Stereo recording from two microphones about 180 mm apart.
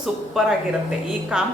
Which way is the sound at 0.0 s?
Centre (ahead or behind).